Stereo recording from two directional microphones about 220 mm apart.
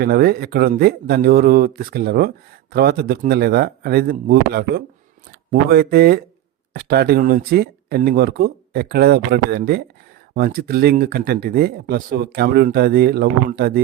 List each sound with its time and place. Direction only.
0.0 s speech: 45° right (ahead or behind)